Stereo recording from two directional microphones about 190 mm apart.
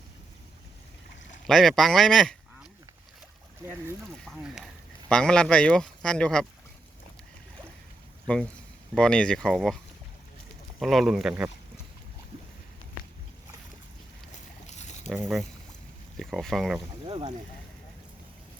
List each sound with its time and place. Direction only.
1.5 s speech: centre (ahead or behind)
4.3 s speech: centre (ahead or behind)
9.0 s speech: 5° left (ahead or behind)
10.8 s speech: centre (ahead or behind)
14.7 s a sound: 40° left (ahead or behind)
15.2 s speech: centre (ahead or behind)
17.1 s speech: 25° right (ahead or behind)